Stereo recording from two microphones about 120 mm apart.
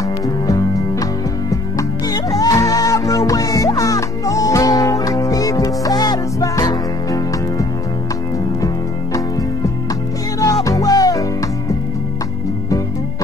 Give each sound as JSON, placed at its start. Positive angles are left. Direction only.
{"t": 0.5, "sound": "music", "side_deg": 30}
{"t": 10.4, "sound": "music", "side_deg": 30}